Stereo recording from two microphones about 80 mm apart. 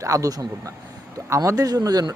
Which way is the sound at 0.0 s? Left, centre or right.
Right.